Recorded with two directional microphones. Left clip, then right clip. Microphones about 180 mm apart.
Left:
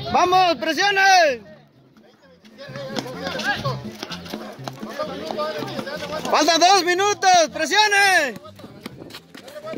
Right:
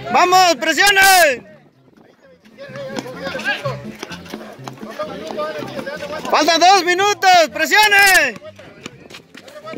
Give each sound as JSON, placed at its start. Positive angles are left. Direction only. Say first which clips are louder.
{"t": 0.1, "sound": "speech", "louder": "right 5 dB", "side_deg": -10}
{"t": 2.6, "sound": "music", "louder": "right 4 dB", "side_deg": 65}
{"t": 3.3, "sound": "music", "louder": "right 3 dB", "side_deg": 25}
{"t": 4.0, "sound": "music", "louder": "even", "side_deg": 55}
{"t": 4.8, "sound": "music", "louder": "right 2 dB", "side_deg": 25}
{"t": 6.3, "sound": "speech", "louder": "right 4 dB", "side_deg": -10}